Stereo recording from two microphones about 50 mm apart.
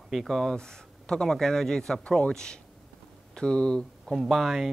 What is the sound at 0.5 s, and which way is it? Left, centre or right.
Speech, centre.